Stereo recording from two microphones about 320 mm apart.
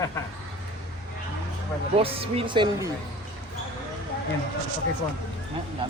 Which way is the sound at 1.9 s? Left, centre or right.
Centre.